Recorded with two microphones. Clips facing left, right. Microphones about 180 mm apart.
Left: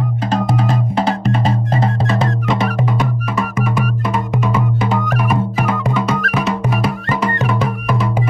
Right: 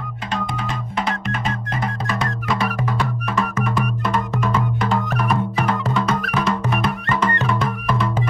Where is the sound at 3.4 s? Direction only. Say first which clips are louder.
Left 2 dB; 10° left (ahead or behind).